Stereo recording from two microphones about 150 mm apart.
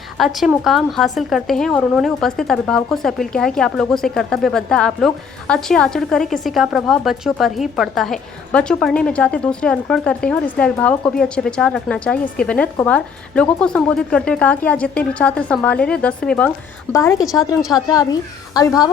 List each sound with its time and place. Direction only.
0.2 s speech: centre (ahead or behind)
16.9 s a woman's voice: 20° left (ahead or behind)